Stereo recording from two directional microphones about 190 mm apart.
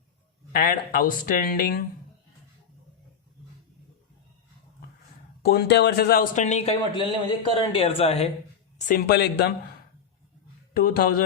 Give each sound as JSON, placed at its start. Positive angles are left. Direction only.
{"t": 0.5, "sound": "speech", "side_deg": 55}
{"t": 5.4, "sound": "speech", "side_deg": 55}
{"t": 8.9, "sound": "speech", "side_deg": 55}
{"t": 10.8, "sound": "speech", "side_deg": 50}